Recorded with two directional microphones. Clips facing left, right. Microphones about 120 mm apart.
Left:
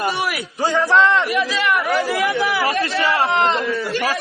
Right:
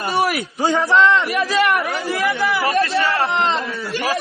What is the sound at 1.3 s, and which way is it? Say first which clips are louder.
Speech: right 2 dB; 45° right (ahead or behind).